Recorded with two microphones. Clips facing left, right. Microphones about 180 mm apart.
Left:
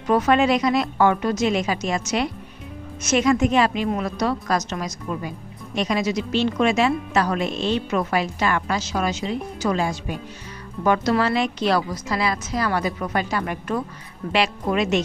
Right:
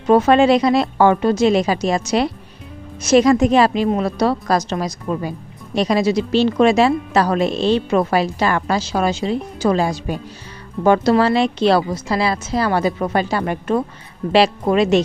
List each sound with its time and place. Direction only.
0.0 s a woman's voice: 30° right (ahead or behind)